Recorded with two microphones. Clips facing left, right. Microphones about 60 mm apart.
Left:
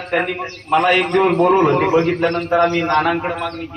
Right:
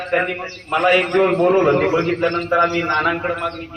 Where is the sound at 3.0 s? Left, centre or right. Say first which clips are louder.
Left 1 dB; centre.